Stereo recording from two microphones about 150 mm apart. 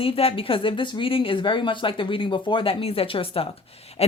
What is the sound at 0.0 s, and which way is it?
Speech, 40° left (ahead or behind).